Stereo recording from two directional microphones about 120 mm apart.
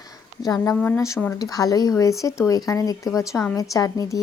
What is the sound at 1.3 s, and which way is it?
A woman's voice, 30° left (ahead or behind).